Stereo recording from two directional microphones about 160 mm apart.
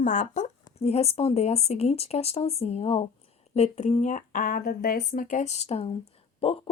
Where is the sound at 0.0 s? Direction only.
55° left (ahead or behind).